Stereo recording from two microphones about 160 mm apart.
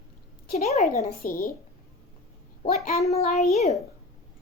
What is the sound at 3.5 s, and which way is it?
Speech, 40° left (ahead or behind).